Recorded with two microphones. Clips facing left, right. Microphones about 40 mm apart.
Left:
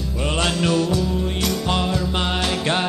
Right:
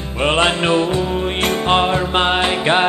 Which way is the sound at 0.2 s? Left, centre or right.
Right.